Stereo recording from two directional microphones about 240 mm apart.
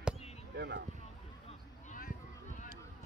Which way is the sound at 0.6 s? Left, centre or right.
Right.